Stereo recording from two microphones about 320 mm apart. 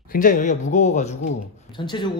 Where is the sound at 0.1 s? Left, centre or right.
Left.